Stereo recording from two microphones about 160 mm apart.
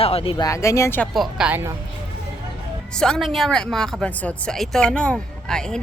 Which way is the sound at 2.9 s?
5° left (ahead or behind).